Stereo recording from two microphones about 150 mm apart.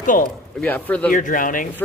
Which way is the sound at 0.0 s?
60° left (ahead or behind).